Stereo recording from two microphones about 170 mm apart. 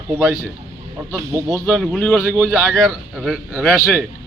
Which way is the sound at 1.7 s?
Centre (ahead or behind).